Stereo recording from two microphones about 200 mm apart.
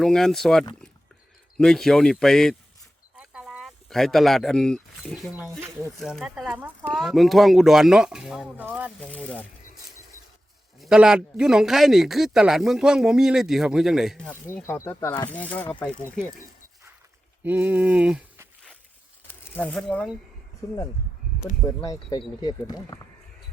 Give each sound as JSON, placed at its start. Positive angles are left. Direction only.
{"t": 0.0, "sound": "a man's voice", "side_deg": 0}
{"t": 3.2, "sound": "a sound", "side_deg": -5}
{"t": 5.4, "sound": "a man's voice", "side_deg": -10}
{"t": 9.0, "sound": "a man's voice", "side_deg": 5}
{"t": 10.8, "sound": "a man's voice", "side_deg": -5}
{"t": 17.4, "sound": "speech", "side_deg": -10}
{"t": 19.5, "sound": "speech", "side_deg": 5}